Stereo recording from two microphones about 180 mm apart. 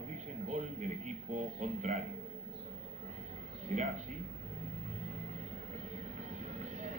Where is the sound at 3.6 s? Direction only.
40° right (ahead or behind).